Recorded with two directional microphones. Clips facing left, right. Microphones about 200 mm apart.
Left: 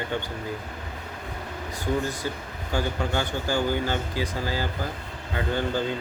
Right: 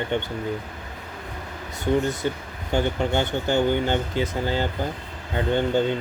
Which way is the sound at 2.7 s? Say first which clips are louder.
Right 4 dB; 20° right (ahead or behind).